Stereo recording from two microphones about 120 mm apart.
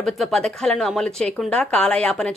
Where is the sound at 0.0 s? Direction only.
5° left (ahead or behind).